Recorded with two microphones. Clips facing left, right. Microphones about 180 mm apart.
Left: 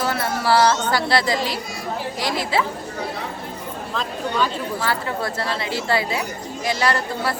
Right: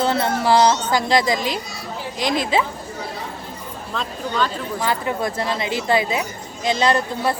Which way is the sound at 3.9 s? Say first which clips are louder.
Even; 5° left (ahead or behind).